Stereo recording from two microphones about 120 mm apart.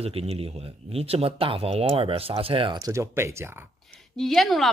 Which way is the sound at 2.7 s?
25° right (ahead or behind).